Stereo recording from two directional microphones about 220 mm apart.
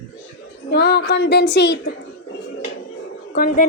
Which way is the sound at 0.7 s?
45° left (ahead or behind).